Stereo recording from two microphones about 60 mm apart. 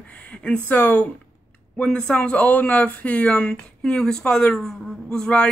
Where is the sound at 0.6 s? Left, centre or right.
Left.